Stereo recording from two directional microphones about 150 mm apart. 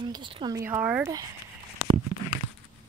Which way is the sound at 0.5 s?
15° right (ahead or behind).